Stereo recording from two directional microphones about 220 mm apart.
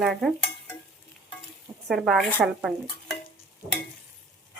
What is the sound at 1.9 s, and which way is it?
Speech, centre (ahead or behind).